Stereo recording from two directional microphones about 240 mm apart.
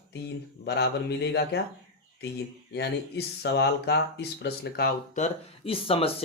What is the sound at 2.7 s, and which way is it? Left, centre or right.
Speech, left.